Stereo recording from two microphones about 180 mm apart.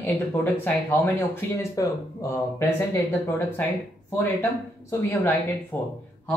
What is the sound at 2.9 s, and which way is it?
Speech, 15° left (ahead or behind).